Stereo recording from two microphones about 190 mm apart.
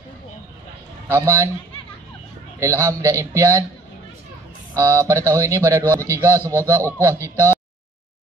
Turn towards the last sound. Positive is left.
turn(degrees=-15)  # may be behind; listen again after turning